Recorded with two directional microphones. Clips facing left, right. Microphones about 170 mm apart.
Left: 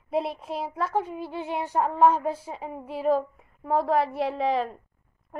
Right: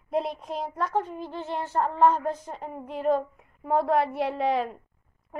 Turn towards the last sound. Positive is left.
turn(degrees=0)  # may be behind; listen again after turning